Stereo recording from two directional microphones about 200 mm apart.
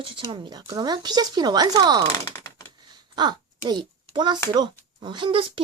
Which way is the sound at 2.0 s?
15° left (ahead or behind).